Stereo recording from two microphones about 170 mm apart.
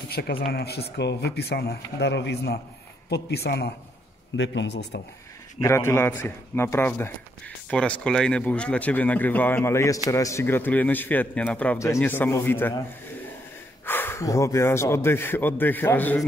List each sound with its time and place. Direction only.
0.1 s speech: 65° left (ahead or behind)
4.4 s speech: 90° left
5.6 s speech: 15° left (ahead or behind)
13.8 s speech: 10° left (ahead or behind)